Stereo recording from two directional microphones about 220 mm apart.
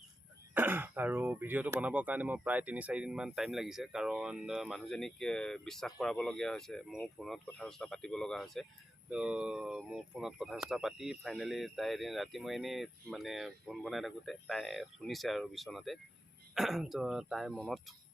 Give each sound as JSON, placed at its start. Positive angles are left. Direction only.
{"t": 0.5, "sound": "speech", "side_deg": -10}